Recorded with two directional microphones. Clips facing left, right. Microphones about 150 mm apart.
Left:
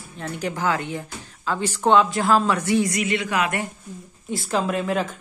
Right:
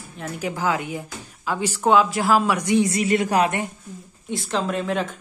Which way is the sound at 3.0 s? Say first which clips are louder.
Right 4 dB; 40° right (ahead or behind).